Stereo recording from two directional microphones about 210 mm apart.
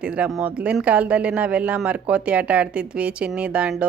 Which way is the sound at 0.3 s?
5° right (ahead or behind).